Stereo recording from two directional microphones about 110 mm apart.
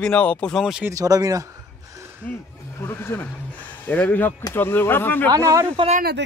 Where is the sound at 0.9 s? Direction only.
35° right (ahead or behind).